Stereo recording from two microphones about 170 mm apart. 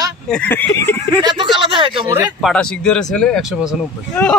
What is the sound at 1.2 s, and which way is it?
Speech, 25° right (ahead or behind).